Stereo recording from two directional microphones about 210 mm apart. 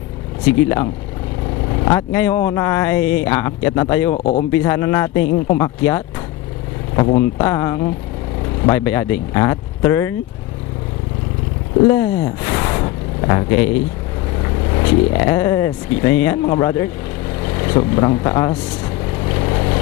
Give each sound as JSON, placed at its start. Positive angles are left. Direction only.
{"t": 1.7, "sound": "speech", "side_deg": 15}
{"t": 4.1, "sound": "speech", "side_deg": 30}
{"t": 4.5, "sound": "speech", "side_deg": 10}
{"t": 6.9, "sound": "speech", "side_deg": 25}
{"t": 7.2, "sound": "speech", "side_deg": 15}
{"t": 11.9, "sound": "speech", "side_deg": 15}
{"t": 19.2, "sound": "vehicle", "side_deg": 20}